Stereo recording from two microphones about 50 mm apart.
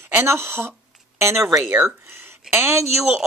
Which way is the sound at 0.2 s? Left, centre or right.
Right.